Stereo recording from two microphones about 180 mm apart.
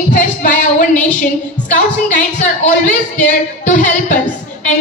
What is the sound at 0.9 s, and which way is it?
Speech, 10° left (ahead or behind).